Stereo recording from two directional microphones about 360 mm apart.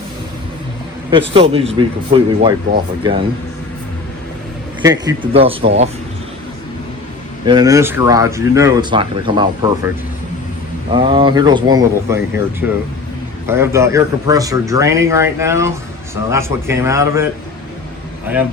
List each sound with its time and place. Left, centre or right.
1.1 s speech: centre
4.8 s speech: centre
7.4 s speech: centre
10.9 s speech: centre